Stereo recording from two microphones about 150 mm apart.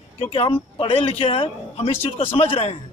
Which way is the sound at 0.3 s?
35° left (ahead or behind).